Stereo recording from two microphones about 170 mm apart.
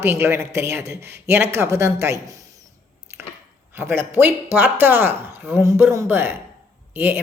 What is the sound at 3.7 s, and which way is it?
A woman's voice, 15° right (ahead or behind).